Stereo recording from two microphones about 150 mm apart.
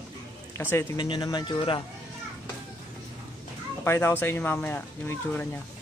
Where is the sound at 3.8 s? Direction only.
15° left (ahead or behind).